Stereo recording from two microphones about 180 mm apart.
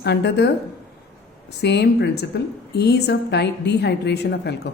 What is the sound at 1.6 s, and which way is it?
A woman's voice, 70° left (ahead or behind).